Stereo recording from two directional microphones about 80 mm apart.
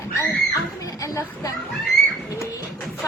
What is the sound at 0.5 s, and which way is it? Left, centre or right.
Children playing, left.